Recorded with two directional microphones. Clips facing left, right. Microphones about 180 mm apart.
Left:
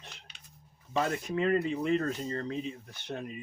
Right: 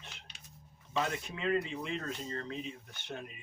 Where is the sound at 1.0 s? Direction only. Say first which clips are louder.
Left 6 dB; 40° left (ahead or behind).